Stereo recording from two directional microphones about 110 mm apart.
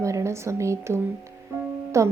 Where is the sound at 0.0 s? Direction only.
25° right (ahead or behind).